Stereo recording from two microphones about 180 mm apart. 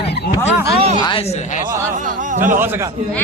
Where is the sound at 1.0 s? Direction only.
30° left (ahead or behind).